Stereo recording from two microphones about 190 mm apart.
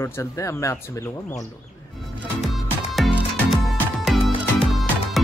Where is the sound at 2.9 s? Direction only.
Centre (ahead or behind).